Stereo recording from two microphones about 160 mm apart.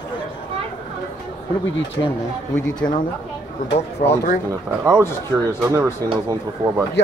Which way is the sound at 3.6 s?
90° left.